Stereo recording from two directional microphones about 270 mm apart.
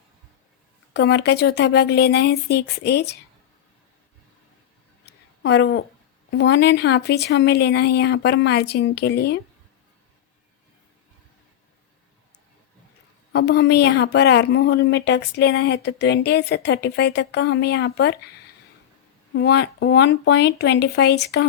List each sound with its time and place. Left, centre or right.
0.9 s a woman's voice: left
5.0 s a sound: left
6.3 s a woman's voice: left
13.3 s a woman's voice: left
19.3 s a woman's voice: left